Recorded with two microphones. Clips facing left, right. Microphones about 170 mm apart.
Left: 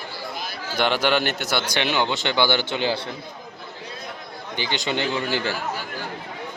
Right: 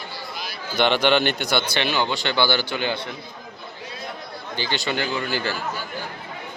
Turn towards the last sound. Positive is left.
turn(degrees=25)  # may be behind; listen again after turning